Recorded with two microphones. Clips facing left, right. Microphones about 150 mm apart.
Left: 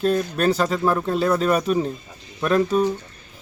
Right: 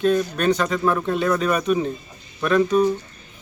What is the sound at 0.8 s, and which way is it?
Speech, centre (ahead or behind).